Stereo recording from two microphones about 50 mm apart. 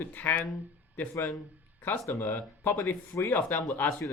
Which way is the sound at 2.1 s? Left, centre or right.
Left.